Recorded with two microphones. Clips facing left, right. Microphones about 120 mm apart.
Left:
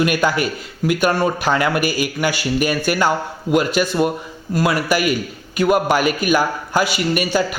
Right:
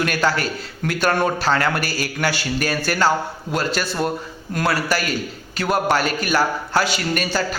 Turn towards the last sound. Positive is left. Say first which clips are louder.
# left 4 dB
turn(degrees=10)  # may be behind; listen again after turning